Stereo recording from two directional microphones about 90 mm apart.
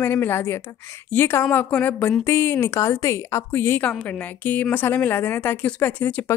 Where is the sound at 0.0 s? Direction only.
25° left (ahead or behind).